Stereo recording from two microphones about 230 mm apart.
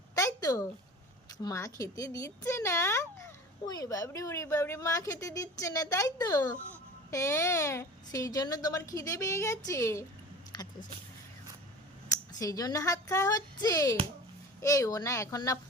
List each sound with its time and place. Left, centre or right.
0.2 s a sound: centre
1.4 s speech: centre
12.3 s speech: centre